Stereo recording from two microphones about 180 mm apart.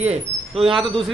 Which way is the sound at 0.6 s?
Centre (ahead or behind).